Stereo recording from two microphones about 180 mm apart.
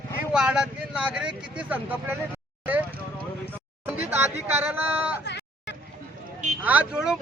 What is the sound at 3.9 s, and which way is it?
Speech, 10° right (ahead or behind).